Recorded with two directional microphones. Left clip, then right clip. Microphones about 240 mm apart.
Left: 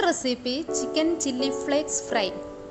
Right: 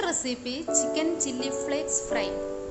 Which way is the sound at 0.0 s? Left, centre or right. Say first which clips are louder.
Left 5 dB; centre.